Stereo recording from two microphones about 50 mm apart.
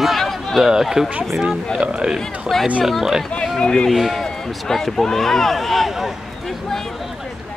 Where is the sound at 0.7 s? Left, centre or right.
Centre.